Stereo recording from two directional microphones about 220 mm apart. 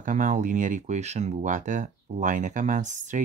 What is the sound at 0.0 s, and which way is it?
Speech, 35° right (ahead or behind).